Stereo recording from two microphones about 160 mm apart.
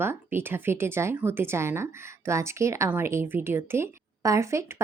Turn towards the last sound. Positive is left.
turn(degrees=-15)  # may be behind; listen again after turning